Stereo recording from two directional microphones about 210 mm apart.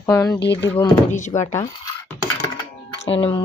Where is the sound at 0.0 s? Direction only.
15° left (ahead or behind).